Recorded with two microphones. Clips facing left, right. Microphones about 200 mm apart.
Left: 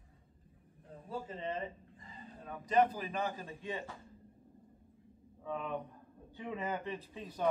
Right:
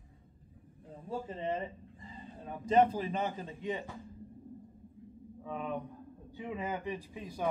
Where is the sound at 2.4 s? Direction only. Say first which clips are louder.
Right 3 dB; 25° right (ahead or behind).